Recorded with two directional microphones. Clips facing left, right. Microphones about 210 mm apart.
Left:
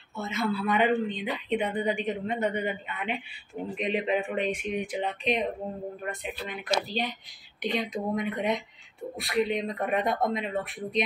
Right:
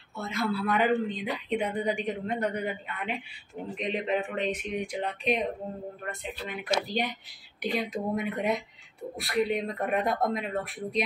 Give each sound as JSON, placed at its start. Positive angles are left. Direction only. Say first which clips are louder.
{"t": 0.1, "sound": "speech", "louder": "left 1 dB", "side_deg": 0}
{"t": 6.4, "sound": "speech", "louder": "even", "side_deg": -10}